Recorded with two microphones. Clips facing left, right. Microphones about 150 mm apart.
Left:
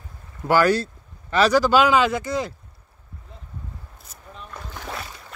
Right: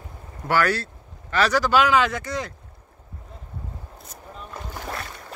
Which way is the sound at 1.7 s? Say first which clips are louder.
Left 2 dB; 25° left (ahead or behind).